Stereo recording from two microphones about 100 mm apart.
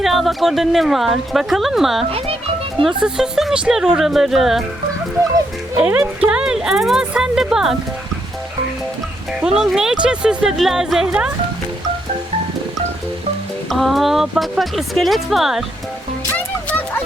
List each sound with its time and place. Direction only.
0.0 s speech: centre (ahead or behind)
2.0 s a child's voice: 70° right (ahead or behind)
2.8 s speech: 5° right (ahead or behind)
5.7 s speech: 15° right (ahead or behind)
9.4 s speech: 5° right (ahead or behind)
13.7 s speech: centre (ahead or behind)
16.3 s music: 20° left (ahead or behind)